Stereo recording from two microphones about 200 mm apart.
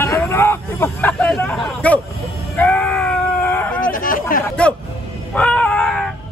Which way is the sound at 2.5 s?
10° left (ahead or behind).